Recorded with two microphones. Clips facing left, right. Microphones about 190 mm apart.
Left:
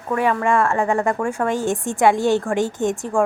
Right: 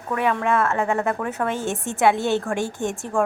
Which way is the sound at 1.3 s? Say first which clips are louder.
Left 4 dB; 15° left (ahead or behind).